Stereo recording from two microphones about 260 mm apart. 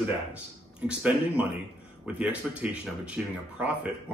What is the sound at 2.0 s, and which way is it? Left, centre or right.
Speech, centre.